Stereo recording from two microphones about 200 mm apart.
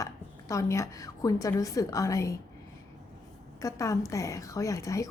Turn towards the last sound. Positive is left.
turn(degrees=15)  # may be behind; listen again after turning